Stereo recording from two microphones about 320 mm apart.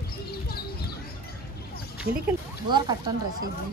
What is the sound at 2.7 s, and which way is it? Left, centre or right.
Speech, centre.